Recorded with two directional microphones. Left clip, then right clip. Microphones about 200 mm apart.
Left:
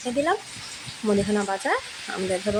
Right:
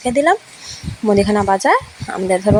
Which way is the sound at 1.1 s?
35° right (ahead or behind).